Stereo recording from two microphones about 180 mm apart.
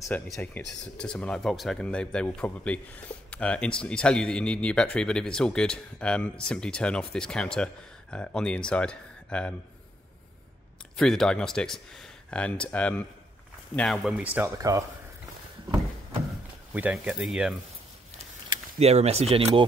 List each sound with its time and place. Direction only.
0.1 s speech: 10° left (ahead or behind)
11.0 s speech: 5° left (ahead or behind); by 14.9 s 15° right (ahead or behind)
16.7 s speech: 10° right (ahead or behind)
18.8 s speech: 35° right (ahead or behind)